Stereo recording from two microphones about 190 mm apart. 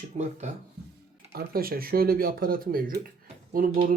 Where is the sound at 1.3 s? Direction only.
50° right (ahead or behind).